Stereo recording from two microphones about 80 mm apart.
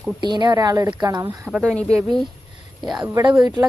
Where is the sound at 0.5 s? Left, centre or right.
Right.